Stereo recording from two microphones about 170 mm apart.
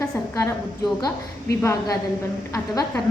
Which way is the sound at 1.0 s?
20° left (ahead or behind).